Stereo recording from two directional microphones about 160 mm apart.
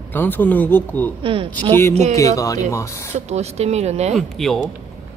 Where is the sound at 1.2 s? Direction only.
35° right (ahead or behind).